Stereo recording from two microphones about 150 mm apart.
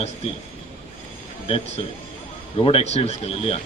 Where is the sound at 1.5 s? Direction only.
40° left (ahead or behind).